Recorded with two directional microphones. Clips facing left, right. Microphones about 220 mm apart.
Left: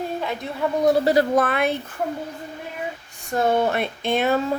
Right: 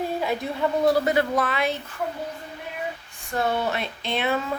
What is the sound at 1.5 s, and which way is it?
Speech, 55° left (ahead or behind).